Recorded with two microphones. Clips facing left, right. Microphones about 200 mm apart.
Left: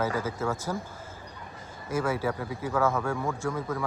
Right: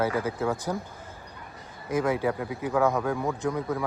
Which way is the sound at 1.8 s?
15° right (ahead or behind).